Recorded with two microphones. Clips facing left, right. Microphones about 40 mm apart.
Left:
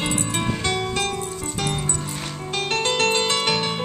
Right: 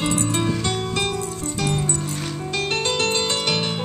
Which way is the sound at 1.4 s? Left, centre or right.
Centre.